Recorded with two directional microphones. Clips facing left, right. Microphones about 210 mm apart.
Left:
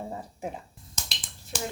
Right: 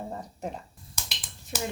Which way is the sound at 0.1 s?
5° left (ahead or behind).